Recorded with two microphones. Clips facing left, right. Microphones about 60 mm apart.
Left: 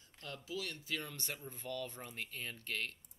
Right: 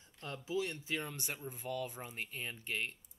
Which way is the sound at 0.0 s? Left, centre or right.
Right.